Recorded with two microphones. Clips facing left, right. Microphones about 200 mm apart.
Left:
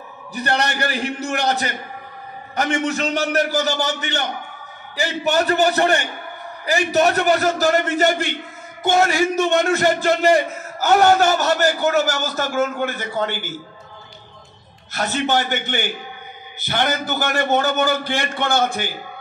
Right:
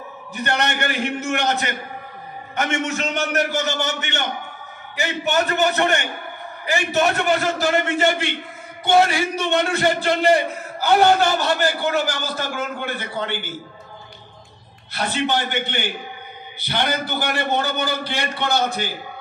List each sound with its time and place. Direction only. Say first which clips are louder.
0.3 s a man's voice: left 1 dB; 35° left (ahead or behind)
14.9 s a man's voice: left 1 dB; 45° left (ahead or behind)